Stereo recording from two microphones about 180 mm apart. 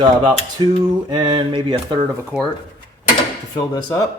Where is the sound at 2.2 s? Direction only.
10° right (ahead or behind).